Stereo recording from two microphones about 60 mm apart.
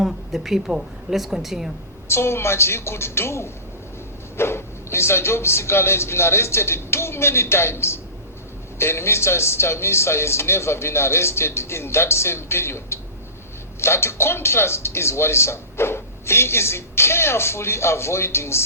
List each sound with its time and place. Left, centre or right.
0.0 s a woman's voice: centre
2.0 s speech: left